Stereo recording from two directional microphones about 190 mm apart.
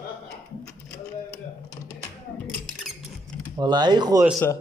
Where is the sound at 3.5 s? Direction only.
20° right (ahead or behind).